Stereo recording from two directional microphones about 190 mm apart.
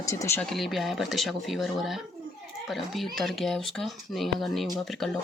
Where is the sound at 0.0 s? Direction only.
15° left (ahead or behind).